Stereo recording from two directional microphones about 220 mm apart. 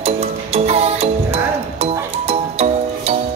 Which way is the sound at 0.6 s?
30° right (ahead or behind).